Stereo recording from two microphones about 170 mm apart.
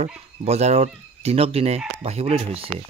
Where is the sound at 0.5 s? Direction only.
40° right (ahead or behind).